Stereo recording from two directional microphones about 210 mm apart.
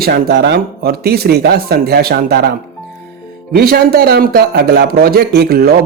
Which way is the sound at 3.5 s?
45° right (ahead or behind).